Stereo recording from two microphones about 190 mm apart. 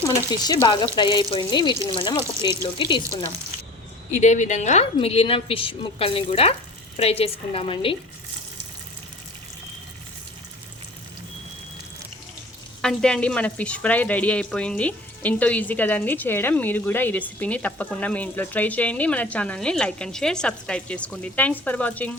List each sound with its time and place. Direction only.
0.1 s speech: 20° left (ahead or behind)
4.1 s a woman's voice: 40° left (ahead or behind)
12.8 s speech: 5° left (ahead or behind)